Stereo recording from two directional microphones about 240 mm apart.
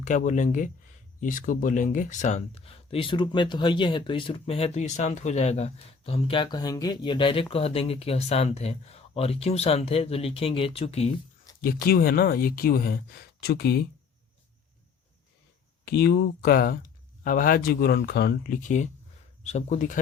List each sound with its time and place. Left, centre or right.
0.0 s speech: left
11.6 s speech: left
15.8 s speech: left